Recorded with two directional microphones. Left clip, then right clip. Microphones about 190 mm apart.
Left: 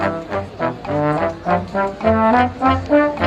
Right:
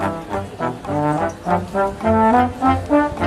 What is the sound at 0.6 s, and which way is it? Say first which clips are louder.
Trombone: left 2 dB; 10° left (ahead or behind).